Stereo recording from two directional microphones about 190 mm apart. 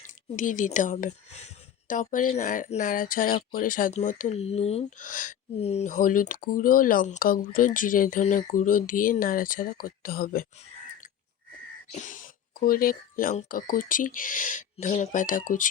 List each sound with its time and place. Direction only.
0.3 s speech: 40° left (ahead or behind)
11.9 s speech: 40° left (ahead or behind)